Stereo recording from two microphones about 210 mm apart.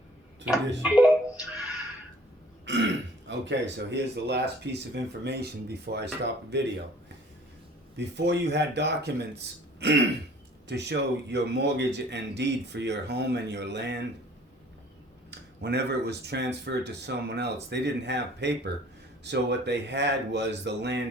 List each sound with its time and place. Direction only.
0.8 s speech: 5° right (ahead or behind)
2.7 s burping: 60° right (ahead or behind)
3.2 s speech: 60° right (ahead or behind)
7.9 s a man's voice: 55° right (ahead or behind)
15.3 s a man's voice: 50° right (ahead or behind)